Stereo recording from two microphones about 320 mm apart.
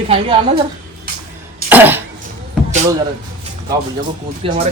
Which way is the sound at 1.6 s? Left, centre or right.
Centre.